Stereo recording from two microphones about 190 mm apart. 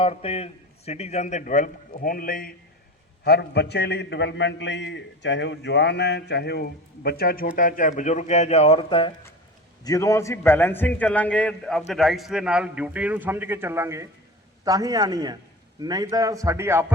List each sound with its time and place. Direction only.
0.0 s a man's voice: 30° left (ahead or behind); by 2.6 s 50° left (ahead or behind)
3.2 s a man's voice: 60° left (ahead or behind); by 9.1 s 30° left (ahead or behind)
9.8 s a man's voice: 15° left (ahead or behind); by 16.8 s 15° right (ahead or behind)